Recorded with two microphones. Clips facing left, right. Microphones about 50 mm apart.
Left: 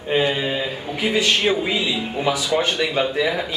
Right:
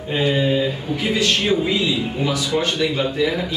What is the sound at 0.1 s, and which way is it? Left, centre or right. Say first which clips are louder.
Speech: right 1 dB; centre.